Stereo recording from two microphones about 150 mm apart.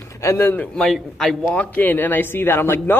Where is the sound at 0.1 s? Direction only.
20° left (ahead or behind).